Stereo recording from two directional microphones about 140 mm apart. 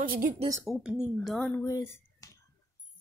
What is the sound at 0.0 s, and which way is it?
Speech, 80° right.